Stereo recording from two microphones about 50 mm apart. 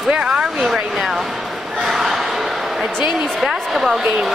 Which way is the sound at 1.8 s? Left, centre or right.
Centre.